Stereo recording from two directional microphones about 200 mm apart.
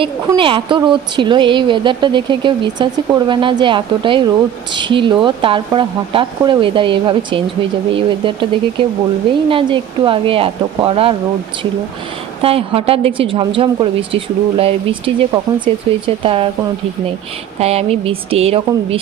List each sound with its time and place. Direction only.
0.0 s speech: 25° right (ahead or behind)
12.4 s speech: 30° right (ahead or behind)
17.6 s speech: 30° right (ahead or behind)